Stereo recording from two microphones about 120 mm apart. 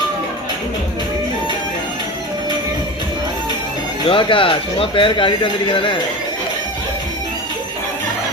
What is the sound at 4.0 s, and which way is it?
A man's voice, 40° left (ahead or behind).